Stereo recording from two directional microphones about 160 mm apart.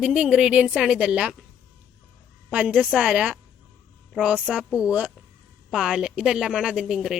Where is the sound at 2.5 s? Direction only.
10° right (ahead or behind).